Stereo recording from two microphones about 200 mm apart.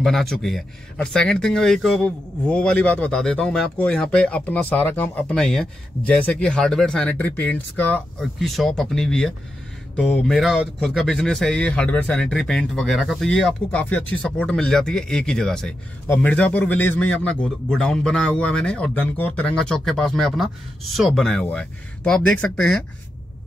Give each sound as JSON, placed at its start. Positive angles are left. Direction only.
{"t": 0.0, "sound": "speech", "side_deg": 0}